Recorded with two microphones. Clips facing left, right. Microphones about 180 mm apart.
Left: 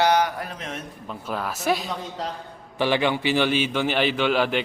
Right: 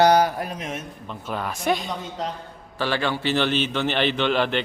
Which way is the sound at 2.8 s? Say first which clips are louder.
Left 3 dB; 15° left (ahead or behind).